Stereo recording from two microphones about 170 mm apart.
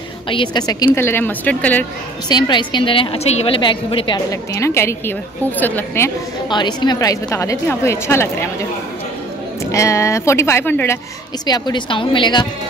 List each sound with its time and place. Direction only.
0.3 s a woman's voice: 30° left (ahead or behind); by 1.9 s 10° left (ahead or behind)
2.2 s a woman's voice: 25° left (ahead or behind)
4.6 s a woman's voice: 15° left (ahead or behind)
6.5 s a woman's voice: 25° left (ahead or behind)
9.7 s a woman's voice: 20° left (ahead or behind)
11.4 s a woman's voice: 25° left (ahead or behind)